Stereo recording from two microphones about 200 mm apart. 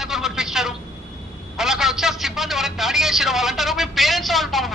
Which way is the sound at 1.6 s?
Centre (ahead or behind).